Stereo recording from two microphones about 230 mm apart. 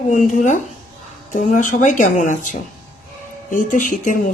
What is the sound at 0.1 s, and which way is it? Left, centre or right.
A woman's voice, left.